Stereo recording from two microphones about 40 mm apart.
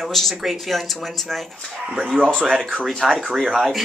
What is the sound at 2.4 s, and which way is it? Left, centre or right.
Speech, centre.